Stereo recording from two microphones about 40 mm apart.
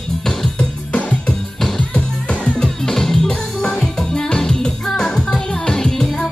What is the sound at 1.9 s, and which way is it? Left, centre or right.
Music, left.